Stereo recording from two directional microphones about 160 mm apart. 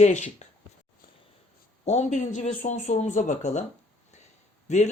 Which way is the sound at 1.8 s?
45° left (ahead or behind).